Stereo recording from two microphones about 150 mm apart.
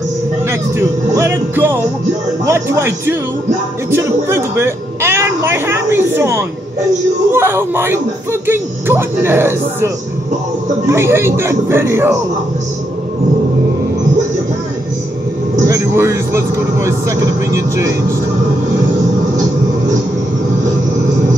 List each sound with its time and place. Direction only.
0.5 s speech: 20° right (ahead or behind)
10.9 s speech: 15° right (ahead or behind)
15.5 s a man's voice: 20° right (ahead or behind)